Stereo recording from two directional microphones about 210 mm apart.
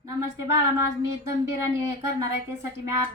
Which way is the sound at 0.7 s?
15° right (ahead or behind).